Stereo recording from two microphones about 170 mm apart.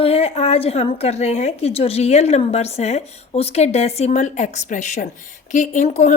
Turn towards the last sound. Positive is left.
turn(degrees=45)  # may be behind; listen again after turning